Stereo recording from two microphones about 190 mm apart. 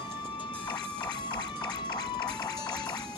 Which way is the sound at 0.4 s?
25° left (ahead or behind).